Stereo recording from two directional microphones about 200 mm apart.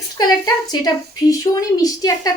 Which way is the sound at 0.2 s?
20° left (ahead or behind).